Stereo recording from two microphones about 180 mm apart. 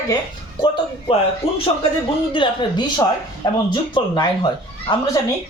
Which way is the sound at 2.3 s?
25° left (ahead or behind).